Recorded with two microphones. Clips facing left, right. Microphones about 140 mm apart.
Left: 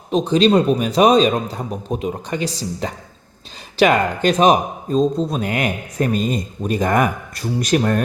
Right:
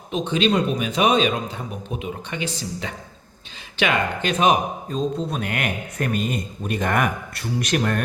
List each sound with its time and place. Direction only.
0.1 s a man's voice: 35° left (ahead or behind)